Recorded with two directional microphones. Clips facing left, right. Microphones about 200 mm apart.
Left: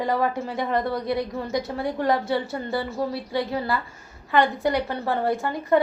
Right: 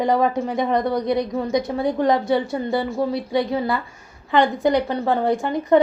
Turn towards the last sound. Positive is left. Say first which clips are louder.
# right 4 dB
turn(degrees=-20)  # may be behind; listen again after turning